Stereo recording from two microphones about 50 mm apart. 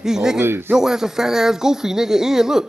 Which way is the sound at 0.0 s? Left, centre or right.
Centre.